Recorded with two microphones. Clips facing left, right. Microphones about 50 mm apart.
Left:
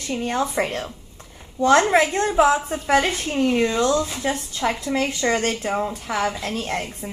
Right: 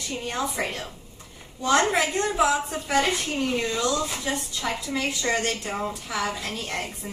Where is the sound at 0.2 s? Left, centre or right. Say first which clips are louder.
Left 6 dB; left.